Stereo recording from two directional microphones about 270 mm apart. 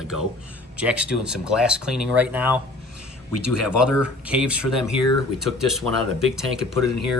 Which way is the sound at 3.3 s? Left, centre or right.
Left.